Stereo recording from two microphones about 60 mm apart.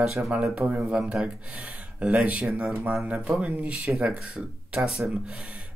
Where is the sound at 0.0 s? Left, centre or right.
Centre.